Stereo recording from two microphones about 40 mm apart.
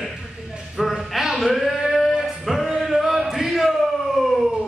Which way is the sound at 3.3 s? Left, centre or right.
Centre.